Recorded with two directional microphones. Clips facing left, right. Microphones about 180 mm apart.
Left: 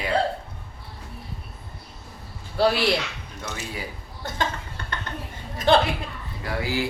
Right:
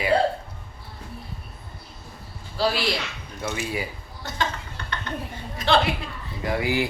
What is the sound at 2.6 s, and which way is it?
Speech, 60° left (ahead or behind).